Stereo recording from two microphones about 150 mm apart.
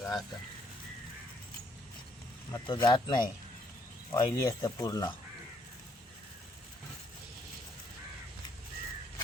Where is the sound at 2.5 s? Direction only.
30° left (ahead or behind).